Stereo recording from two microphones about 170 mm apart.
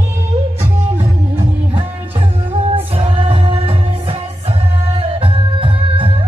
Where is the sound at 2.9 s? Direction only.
30° right (ahead or behind).